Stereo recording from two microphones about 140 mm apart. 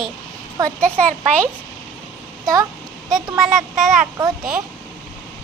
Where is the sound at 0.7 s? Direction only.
10° left (ahead or behind).